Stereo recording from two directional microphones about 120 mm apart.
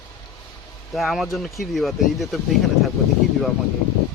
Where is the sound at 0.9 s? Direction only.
Centre (ahead or behind).